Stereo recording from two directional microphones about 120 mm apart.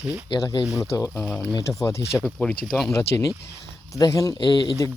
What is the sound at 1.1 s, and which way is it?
Speech, 15° left (ahead or behind).